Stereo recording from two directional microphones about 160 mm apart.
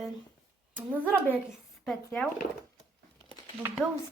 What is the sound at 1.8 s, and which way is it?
Speech, 5° left (ahead or behind).